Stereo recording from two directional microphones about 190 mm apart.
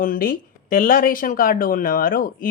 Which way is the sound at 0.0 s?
45° left (ahead or behind).